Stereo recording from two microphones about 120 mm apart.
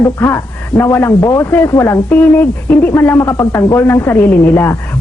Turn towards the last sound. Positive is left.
turn(degrees=20)  # may be behind; listen again after turning